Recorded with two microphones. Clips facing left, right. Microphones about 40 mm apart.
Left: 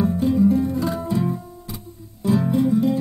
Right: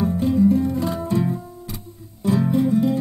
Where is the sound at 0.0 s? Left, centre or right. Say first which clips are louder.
Even; centre.